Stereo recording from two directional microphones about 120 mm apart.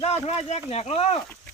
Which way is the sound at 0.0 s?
60° left (ahead or behind).